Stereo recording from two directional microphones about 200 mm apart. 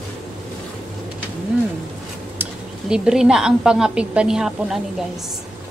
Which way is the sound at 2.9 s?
5° right (ahead or behind).